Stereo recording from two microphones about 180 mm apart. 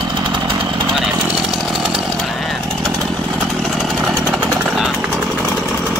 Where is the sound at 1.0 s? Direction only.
5° right (ahead or behind).